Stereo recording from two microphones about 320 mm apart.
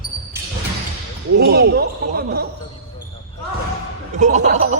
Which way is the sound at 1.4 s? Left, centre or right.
Right.